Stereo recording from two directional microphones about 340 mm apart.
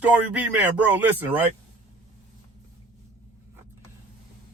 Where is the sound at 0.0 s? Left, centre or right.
Centre.